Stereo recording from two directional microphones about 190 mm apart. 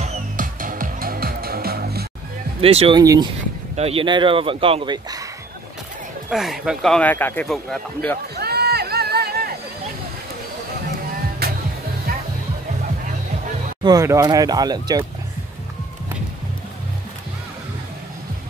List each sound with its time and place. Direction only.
0.0 s music: 40° right (ahead or behind)
2.6 s speech: 30° right (ahead or behind)
3.0 s speech: 20° right (ahead or behind)
3.7 s speech: 30° right (ahead or behind)
6.3 s speech: centre (ahead or behind)
8.4 s a sound: 55° right (ahead or behind)
11.4 s music: 55° right (ahead or behind)
13.8 s speech: 15° right (ahead or behind)